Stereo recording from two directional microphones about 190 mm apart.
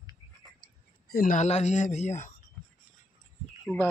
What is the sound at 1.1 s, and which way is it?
Speech, 45° left (ahead or behind).